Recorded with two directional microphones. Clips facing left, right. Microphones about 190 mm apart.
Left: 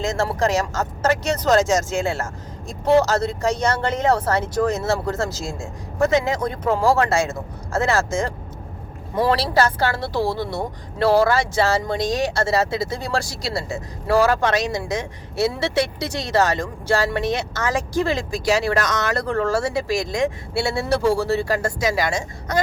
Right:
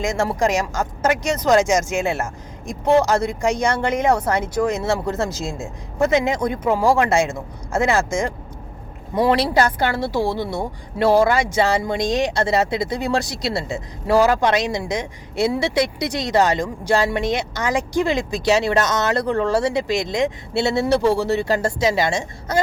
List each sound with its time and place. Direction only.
0.0 s speech: 15° right (ahead or behind)